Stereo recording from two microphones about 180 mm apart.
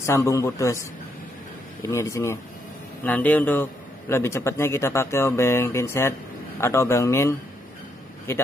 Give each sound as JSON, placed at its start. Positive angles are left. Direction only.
{"t": 0.0, "sound": "speech", "side_deg": 15}
{"t": 1.9, "sound": "speech", "side_deg": 15}